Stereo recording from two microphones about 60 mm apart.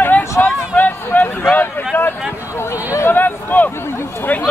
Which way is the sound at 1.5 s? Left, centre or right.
Left.